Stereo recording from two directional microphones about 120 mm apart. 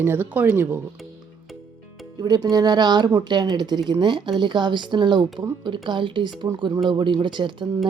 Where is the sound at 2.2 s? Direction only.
35° right (ahead or behind).